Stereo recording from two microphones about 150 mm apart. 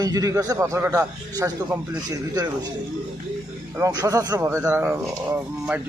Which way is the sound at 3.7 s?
20° right (ahead or behind).